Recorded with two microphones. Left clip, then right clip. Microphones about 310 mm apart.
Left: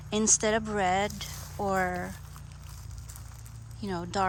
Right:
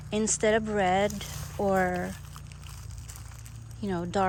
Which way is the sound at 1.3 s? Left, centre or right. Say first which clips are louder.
Right 2 dB; centre.